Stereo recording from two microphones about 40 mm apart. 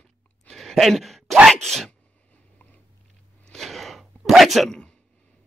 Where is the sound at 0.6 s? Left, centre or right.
Centre.